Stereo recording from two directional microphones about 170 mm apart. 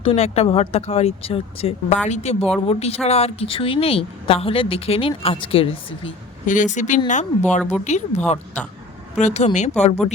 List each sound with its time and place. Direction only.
0.0 s a woman's voice: 35° left (ahead or behind)
6.4 s a woman's voice: 50° left (ahead or behind)